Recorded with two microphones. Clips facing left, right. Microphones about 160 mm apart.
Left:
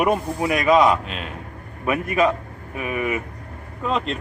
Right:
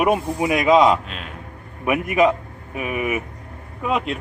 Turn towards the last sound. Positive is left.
turn(degrees=-10)  # may be behind; listen again after turning